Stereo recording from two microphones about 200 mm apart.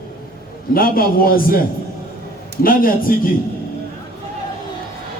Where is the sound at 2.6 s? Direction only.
45° left (ahead or behind).